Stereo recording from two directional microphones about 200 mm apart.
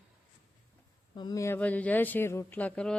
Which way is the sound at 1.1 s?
20° left (ahead or behind).